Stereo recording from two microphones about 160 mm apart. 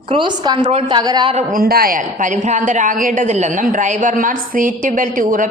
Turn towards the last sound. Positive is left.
turn(degrees=-55)  # may be behind; listen again after turning